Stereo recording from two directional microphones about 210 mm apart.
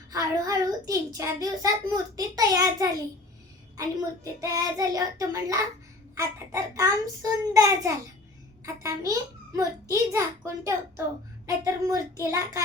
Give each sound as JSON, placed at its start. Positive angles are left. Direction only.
{"t": 0.1, "sound": "a child's voice", "side_deg": -15}